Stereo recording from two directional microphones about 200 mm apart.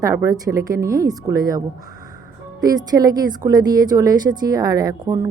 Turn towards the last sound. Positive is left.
turn(degrees=-20)  # may be behind; listen again after turning